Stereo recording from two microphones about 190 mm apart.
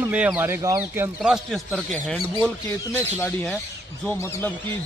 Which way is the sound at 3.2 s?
10° left (ahead or behind).